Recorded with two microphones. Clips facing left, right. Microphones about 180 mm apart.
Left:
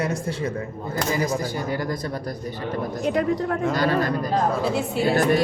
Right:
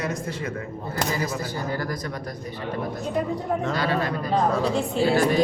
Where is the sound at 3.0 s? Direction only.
90° left.